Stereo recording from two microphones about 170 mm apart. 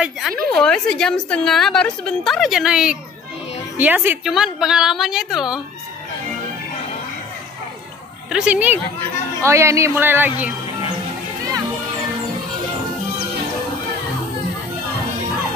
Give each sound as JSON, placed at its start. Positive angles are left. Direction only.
{"t": 0.0, "sound": "a sound", "side_deg": 0}
{"t": 0.5, "sound": "a woman's voice", "side_deg": 5}
{"t": 8.3, "sound": "speech", "side_deg": -5}